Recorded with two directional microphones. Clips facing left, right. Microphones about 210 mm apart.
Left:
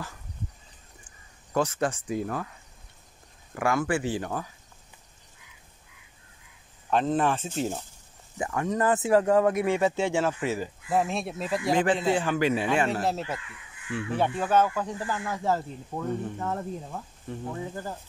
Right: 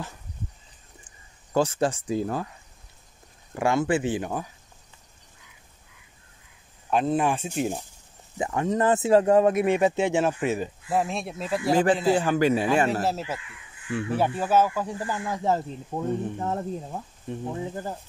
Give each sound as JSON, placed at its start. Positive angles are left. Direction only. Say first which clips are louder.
{"t": 1.5, "sound": "speech", "louder": "right 3 dB", "side_deg": -30}
{"t": 3.5, "sound": "speech", "louder": "right 3 dB", "side_deg": -25}
{"t": 6.9, "sound": "speech", "louder": "right 1 dB", "side_deg": -10}
{"t": 8.4, "sound": "speech", "louder": "right 3 dB", "side_deg": -25}
{"t": 10.9, "sound": "speech", "louder": "even", "side_deg": 0}
{"t": 12.2, "sound": "a man's voice", "louder": "right 3 dB", "side_deg": -40}
{"t": 14.1, "sound": "speech", "louder": "right 1 dB", "side_deg": -5}